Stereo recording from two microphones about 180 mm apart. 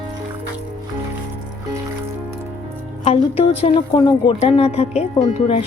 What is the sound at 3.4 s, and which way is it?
Speech, 35° left (ahead or behind).